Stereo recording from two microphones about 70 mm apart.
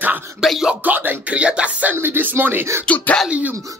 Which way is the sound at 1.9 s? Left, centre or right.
Right.